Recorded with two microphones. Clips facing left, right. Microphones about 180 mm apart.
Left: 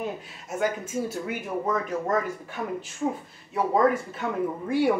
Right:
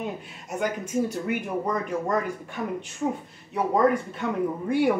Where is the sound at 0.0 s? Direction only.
Centre (ahead or behind).